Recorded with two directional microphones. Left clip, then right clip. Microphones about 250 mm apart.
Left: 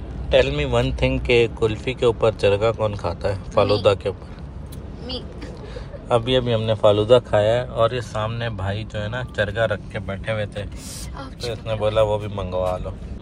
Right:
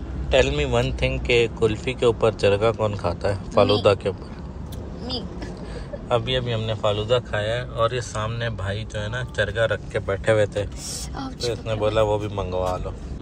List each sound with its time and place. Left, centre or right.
0.3 s speech: centre
6.0 s speech: centre
9.9 s speech: centre
11.5 s speech: centre